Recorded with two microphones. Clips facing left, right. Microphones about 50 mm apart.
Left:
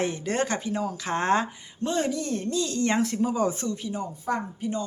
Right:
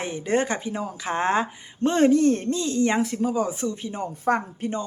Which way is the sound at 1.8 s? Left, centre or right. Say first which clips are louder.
Right 9 dB; right.